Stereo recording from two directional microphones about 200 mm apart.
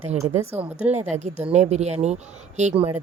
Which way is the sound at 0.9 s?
35° right (ahead or behind).